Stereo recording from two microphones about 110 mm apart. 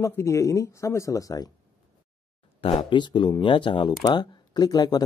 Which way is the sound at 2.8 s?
45° left (ahead or behind).